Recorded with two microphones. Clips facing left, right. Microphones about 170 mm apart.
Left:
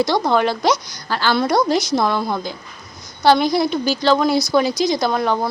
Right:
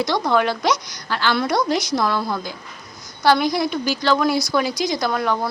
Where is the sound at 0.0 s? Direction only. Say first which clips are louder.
Left 2 dB; 30° left (ahead or behind).